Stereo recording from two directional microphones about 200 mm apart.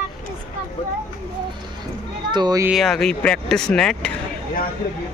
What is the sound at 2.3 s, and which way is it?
Speech, 20° right (ahead or behind).